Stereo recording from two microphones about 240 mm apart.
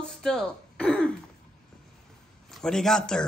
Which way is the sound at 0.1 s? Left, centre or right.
Centre.